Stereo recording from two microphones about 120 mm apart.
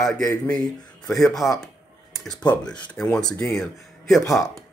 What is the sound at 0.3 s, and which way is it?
Speech, 35° left (ahead or behind).